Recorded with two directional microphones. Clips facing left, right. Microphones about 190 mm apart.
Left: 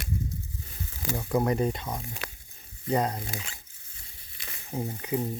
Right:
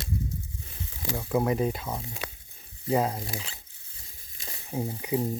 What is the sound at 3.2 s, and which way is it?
Speech, 30° right (ahead or behind).